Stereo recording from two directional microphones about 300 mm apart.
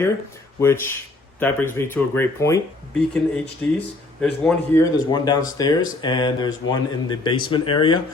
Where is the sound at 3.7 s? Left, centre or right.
Centre.